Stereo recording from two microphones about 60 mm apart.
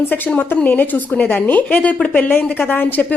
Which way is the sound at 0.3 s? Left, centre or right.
Left.